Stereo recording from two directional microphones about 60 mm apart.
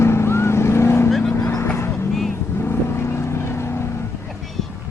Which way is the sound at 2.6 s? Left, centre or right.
Left.